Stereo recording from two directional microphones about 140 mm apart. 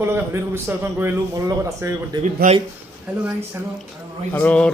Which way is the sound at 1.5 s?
25° right (ahead or behind).